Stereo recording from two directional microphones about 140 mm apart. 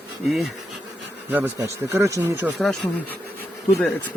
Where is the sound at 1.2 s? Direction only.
15° right (ahead or behind).